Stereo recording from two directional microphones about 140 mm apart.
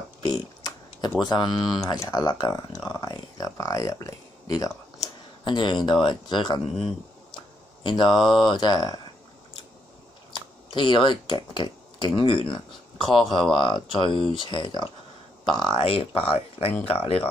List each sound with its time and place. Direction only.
0.2 s a sound: 30° left (ahead or behind)
1.2 s speech: 35° left (ahead or behind)
1.5 s speech: centre (ahead or behind)
1.8 s speech: 25° left (ahead or behind)
7.8 s speech: 35° left (ahead or behind)
10.7 s speech: 35° left (ahead or behind)